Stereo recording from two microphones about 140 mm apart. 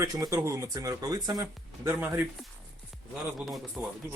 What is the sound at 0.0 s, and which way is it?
Speech, 25° right (ahead or behind).